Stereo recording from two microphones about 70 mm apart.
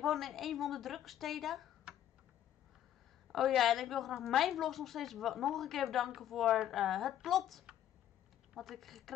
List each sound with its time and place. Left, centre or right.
0.0 s a woman's voice: centre
3.3 s a woman's voice: centre